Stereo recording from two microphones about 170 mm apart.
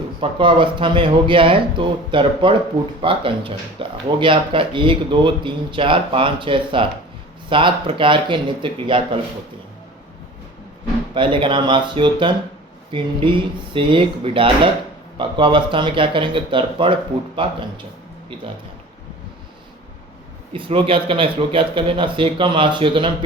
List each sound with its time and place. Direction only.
0.2 s speech: 30° right (ahead or behind)
11.1 s speech: 30° right (ahead or behind)
20.5 s speech: 30° right (ahead or behind)